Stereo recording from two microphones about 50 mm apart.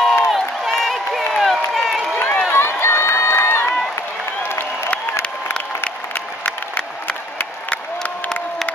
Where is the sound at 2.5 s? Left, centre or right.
Left.